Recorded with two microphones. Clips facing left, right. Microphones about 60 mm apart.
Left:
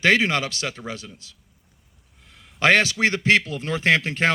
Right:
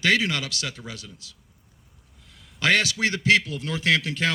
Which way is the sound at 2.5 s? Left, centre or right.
Left.